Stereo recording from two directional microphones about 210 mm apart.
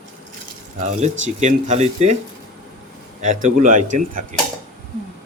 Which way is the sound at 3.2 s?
35° right (ahead or behind).